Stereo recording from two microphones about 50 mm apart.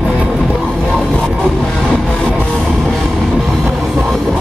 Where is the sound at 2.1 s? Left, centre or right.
Left.